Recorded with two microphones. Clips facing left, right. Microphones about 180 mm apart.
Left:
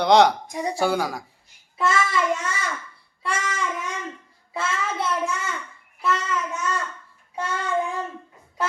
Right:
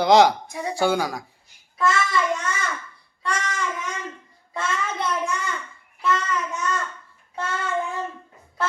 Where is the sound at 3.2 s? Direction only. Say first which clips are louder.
Even; 5° left (ahead or behind).